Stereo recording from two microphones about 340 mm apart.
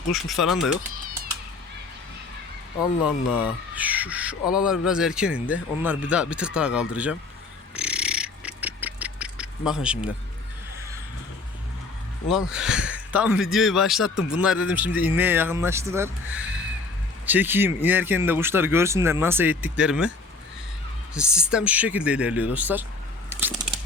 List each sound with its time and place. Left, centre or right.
0.1 s speech: centre
0.9 s cat: right
3.0 s speech: centre
7.8 s a sound: centre
12.3 s speech: centre
16.3 s a sound: centre
17.2 s speech: centre
21.1 s speech: centre
23.3 s a sound: centre